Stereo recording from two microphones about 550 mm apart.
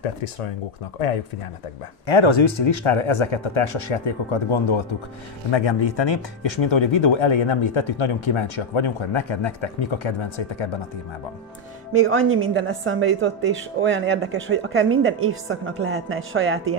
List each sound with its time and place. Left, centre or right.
2.0 s speech: left
5.9 s speech: left
12.1 s a woman's voice: right